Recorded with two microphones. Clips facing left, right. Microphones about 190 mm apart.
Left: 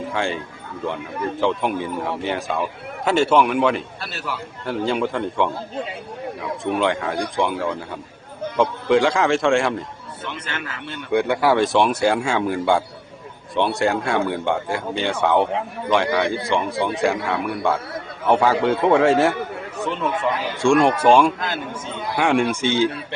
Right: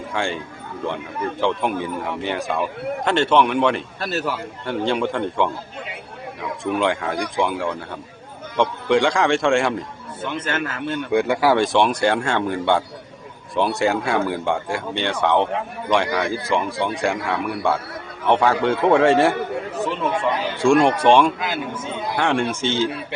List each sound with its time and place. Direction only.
0.1 s a man's voice: centre (ahead or behind)
4.0 s a man's voice: 40° right (ahead or behind)
4.6 s a man's voice: centre (ahead or behind)
6.7 s a man's voice: centre (ahead or behind)
10.3 s a man's voice: 45° right (ahead or behind)
11.1 s a man's voice: centre (ahead or behind)
21.3 s a man's voice: 10° right (ahead or behind)
22.2 s a man's voice: 10° left (ahead or behind)